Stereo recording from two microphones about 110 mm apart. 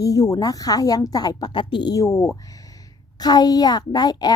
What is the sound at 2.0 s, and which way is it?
A woman's voice, 25° left (ahead or behind).